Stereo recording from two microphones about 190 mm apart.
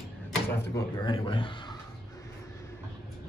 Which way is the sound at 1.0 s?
25° left (ahead or behind).